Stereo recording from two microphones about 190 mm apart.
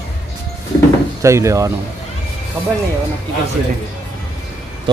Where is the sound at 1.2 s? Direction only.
15° right (ahead or behind).